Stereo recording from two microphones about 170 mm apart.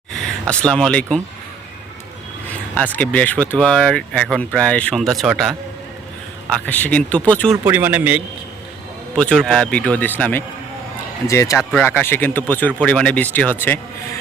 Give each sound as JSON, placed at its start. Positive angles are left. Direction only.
{"t": 0.1, "sound": "speech", "side_deg": 5}
{"t": 2.7, "sound": "speech", "side_deg": 10}
{"t": 6.7, "sound": "speech", "side_deg": 10}
{"t": 7.5, "sound": "speech", "side_deg": -10}
{"t": 9.1, "sound": "speech", "side_deg": 5}